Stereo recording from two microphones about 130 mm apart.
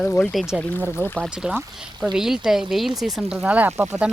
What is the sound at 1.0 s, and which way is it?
Speech, 10° left (ahead or behind).